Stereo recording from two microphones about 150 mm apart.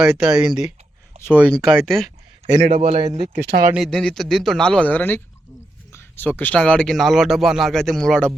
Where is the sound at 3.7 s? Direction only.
Centre (ahead or behind).